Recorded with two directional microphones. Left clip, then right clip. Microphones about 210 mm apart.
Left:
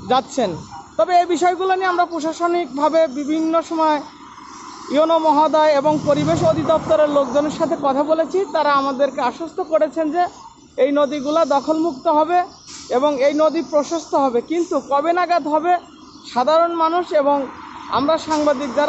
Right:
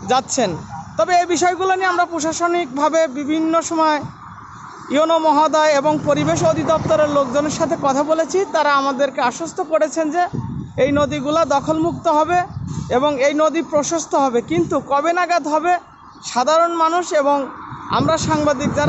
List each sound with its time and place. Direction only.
0.1 s a man's voice: centre (ahead or behind)